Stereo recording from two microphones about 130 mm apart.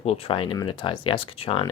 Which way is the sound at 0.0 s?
50° left (ahead or behind).